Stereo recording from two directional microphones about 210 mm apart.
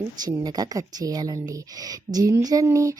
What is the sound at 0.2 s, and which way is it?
Speech, 15° right (ahead or behind).